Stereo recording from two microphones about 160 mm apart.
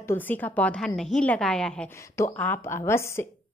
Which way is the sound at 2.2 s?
15° left (ahead or behind).